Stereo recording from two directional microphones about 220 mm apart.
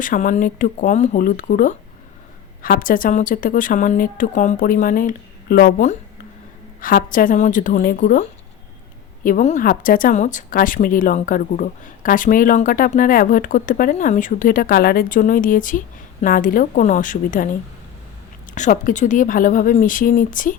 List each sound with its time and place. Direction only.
0.0 s speech: 35° left (ahead or behind)
18.5 s speech: 35° left (ahead or behind)